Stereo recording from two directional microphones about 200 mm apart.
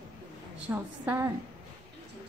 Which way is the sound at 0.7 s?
10° right (ahead or behind).